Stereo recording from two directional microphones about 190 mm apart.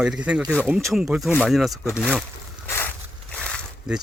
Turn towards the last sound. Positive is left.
turn(degrees=0)  # may be behind; listen again after turning